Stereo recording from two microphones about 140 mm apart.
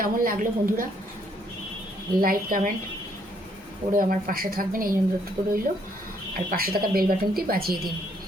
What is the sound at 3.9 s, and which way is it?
A woman's voice, 90° right.